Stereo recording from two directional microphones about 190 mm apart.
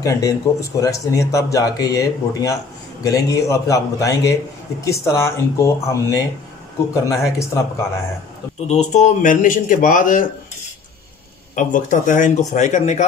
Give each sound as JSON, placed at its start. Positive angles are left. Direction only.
{"t": 0.0, "sound": "speech", "side_deg": 15}
{"t": 8.6, "sound": "speech", "side_deg": 35}
{"t": 11.5, "sound": "speech", "side_deg": 40}